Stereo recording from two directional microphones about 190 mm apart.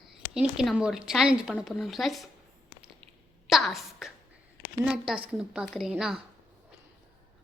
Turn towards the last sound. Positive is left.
turn(degrees=-5)  # may be behind; listen again after turning